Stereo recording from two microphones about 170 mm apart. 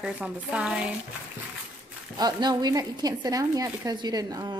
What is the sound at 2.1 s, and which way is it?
A woman's voice, 25° right (ahead or behind).